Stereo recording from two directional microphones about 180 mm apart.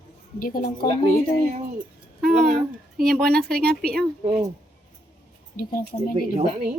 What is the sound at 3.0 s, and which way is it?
Speech, centre (ahead or behind).